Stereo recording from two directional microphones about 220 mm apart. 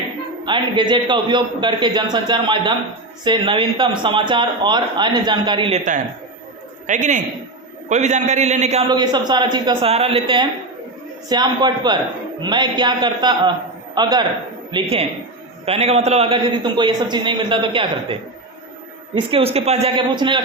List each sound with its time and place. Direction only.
0.4 s a man's voice: 20° right (ahead or behind)